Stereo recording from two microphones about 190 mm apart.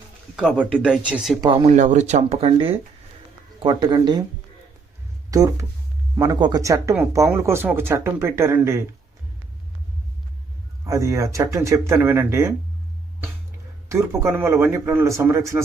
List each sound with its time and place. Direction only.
0.3 s speech: 5° right (ahead or behind)
1.4 s speech: 20° right (ahead or behind)
1.6 s speech: 40° right (ahead or behind); by 4.2 s 20° right (ahead or behind)
5.3 s speech: 20° right (ahead or behind)
10.8 s speech: 15° right (ahead or behind)
13.8 s speech: 15° right (ahead or behind)